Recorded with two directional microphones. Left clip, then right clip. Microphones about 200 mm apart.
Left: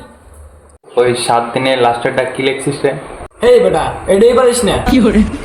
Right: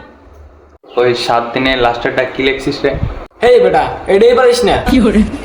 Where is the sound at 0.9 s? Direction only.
Centre (ahead or behind).